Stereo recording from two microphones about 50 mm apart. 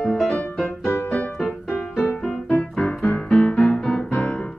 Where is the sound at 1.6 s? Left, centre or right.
Left.